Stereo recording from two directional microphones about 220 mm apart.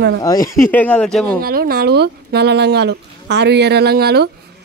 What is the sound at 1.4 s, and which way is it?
A man's voice, 45° right (ahead or behind).